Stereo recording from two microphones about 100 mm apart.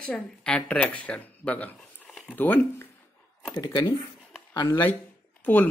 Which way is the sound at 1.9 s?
15° left (ahead or behind).